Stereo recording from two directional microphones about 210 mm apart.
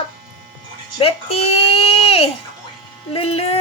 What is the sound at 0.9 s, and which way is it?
Speech, 30° left (ahead or behind).